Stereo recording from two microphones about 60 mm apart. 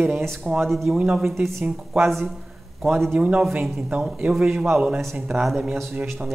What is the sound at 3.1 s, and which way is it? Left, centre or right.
Speech, centre.